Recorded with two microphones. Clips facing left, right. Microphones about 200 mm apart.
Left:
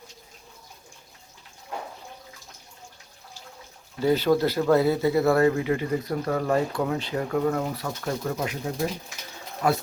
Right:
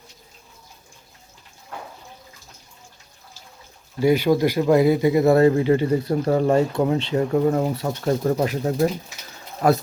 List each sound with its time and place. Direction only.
4.0 s speech: 10° right (ahead or behind); by 9.8 s 40° right (ahead or behind)